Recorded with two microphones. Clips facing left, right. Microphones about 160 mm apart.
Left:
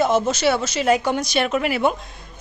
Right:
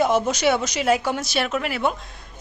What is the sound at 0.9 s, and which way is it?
A woman's voice, 5° right (ahead or behind).